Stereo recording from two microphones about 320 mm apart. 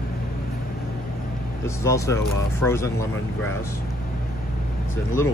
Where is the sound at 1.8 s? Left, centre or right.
Centre.